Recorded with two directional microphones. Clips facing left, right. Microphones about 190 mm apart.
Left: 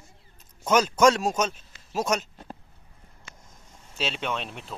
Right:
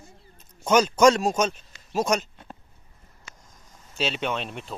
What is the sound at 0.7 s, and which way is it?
Speech, centre (ahead or behind).